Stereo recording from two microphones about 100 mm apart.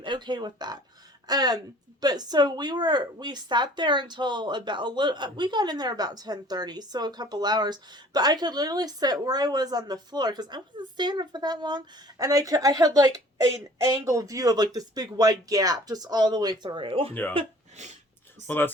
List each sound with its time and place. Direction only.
0.0 s a woman's voice: 50° right (ahead or behind)
16.6 s speech: 60° right (ahead or behind)
18.4 s speech: 20° left (ahead or behind)